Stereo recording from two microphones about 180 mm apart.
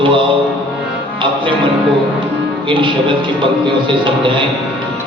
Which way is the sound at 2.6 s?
25° right (ahead or behind).